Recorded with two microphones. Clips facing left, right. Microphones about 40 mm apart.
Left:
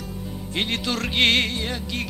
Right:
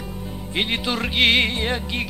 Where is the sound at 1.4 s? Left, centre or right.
Right.